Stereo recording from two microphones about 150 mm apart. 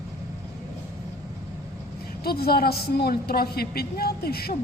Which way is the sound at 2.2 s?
90° left.